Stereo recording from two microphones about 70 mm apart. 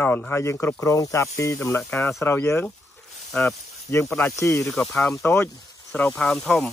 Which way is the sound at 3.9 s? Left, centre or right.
Left.